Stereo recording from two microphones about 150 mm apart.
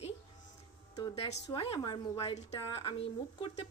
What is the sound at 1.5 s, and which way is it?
A woman's voice, 30° left (ahead or behind).